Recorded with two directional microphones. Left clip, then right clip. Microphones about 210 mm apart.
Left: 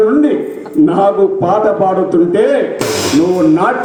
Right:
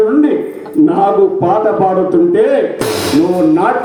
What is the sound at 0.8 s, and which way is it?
A man's voice, 45° left (ahead or behind).